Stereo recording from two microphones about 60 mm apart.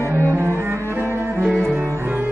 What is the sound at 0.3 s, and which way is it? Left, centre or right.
Cello, right.